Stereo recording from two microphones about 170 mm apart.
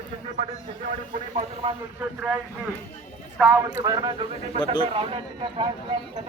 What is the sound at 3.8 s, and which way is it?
Speech, 25° right (ahead or behind).